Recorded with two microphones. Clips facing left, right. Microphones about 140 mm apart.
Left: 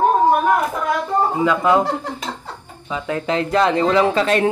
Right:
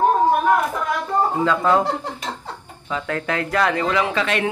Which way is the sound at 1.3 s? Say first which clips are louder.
Left 2 dB; 15° left (ahead or behind).